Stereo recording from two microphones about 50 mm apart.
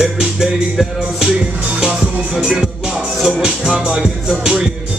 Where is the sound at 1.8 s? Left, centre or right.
Right.